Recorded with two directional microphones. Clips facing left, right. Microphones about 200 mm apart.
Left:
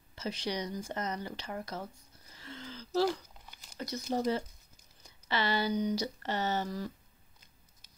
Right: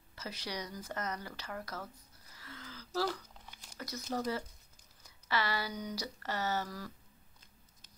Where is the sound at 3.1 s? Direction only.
5° left (ahead or behind).